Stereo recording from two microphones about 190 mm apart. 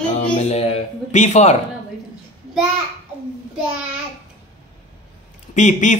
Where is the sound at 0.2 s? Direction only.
35° left (ahead or behind).